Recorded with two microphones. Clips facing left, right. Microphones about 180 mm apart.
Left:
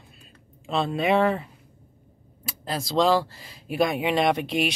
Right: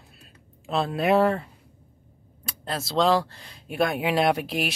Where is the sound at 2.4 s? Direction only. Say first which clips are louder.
Left 1 dB; centre (ahead or behind).